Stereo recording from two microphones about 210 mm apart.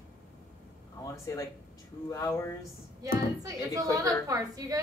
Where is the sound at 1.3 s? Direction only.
15° left (ahead or behind).